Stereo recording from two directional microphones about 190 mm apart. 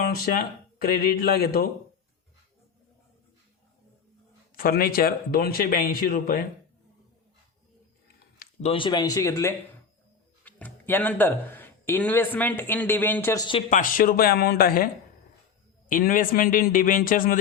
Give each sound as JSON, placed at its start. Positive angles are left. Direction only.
{"t": 0.8, "sound": "a man's voice", "side_deg": 50}
{"t": 4.5, "sound": "a man's voice", "side_deg": 50}
{"t": 8.6, "sound": "a man's voice", "side_deg": 25}
{"t": 13.7, "sound": "a man's voice", "side_deg": 45}
{"t": 15.9, "sound": "a man's voice", "side_deg": 45}